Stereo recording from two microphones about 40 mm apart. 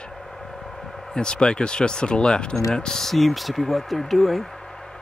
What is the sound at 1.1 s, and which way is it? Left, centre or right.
Speech, left.